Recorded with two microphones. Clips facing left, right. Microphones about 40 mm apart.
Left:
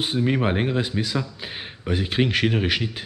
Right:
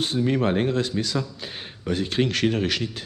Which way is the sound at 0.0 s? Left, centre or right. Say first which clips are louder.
Even; centre.